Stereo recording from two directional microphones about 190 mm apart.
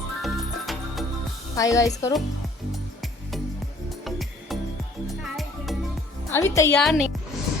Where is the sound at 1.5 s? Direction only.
15° left (ahead or behind).